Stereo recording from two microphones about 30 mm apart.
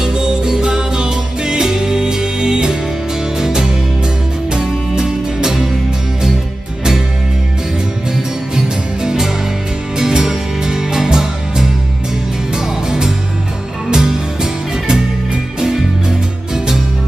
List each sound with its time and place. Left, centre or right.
0.0 s music: right
8.5 s music: right